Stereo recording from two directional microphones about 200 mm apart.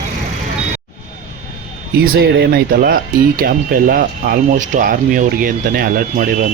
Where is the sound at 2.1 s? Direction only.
55° right (ahead or behind).